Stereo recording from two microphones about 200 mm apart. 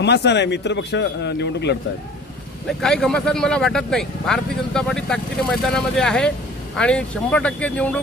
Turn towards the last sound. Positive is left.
turn(degrees=5)  # may be behind; listen again after turning